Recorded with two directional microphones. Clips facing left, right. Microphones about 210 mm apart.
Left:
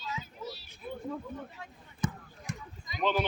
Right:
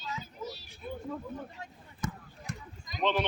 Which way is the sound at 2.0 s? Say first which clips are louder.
Left 3 dB; 20° left (ahead or behind).